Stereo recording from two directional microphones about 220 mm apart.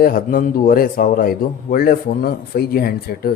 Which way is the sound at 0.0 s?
40° left (ahead or behind).